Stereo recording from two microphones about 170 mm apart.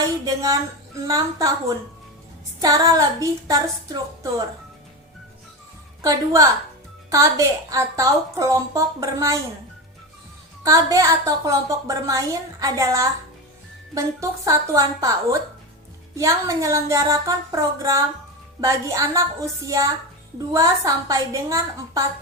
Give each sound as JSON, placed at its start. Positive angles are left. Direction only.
{"t": 0.3, "sound": "a woman's voice", "side_deg": -20}
{"t": 2.6, "sound": "a woman's voice", "side_deg": -20}
{"t": 6.0, "sound": "a woman's voice", "side_deg": -20}
{"t": 10.6, "sound": "a woman's voice", "side_deg": -20}
{"t": 16.1, "sound": "a sound", "side_deg": -20}